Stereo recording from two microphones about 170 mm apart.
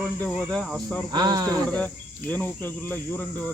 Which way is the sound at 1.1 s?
25° right (ahead or behind).